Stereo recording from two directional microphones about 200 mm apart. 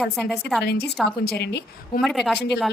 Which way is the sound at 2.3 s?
55° left (ahead or behind).